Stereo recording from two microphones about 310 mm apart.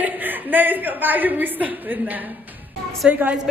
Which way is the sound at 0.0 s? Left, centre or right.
Centre.